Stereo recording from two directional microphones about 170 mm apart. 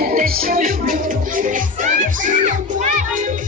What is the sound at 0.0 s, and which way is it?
Music, 55° right (ahead or behind).